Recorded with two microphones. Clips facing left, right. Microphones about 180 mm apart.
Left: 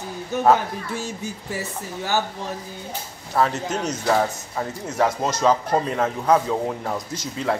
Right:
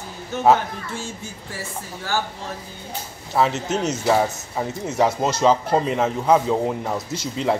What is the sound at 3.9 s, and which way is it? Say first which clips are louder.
Speech: even; 10° right (ahead or behind).